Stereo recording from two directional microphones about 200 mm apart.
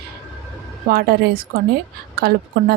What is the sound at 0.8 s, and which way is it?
A woman's voice, 50° right (ahead or behind).